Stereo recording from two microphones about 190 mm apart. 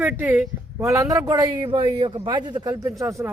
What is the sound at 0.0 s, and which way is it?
A man's voice, 10° right (ahead or behind).